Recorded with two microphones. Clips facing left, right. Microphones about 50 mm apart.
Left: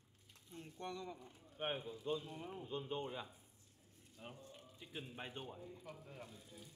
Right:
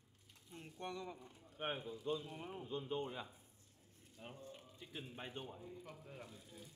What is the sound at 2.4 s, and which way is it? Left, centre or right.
Speech, centre.